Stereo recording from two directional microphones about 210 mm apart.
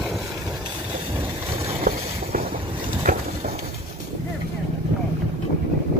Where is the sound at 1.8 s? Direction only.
45° right (ahead or behind).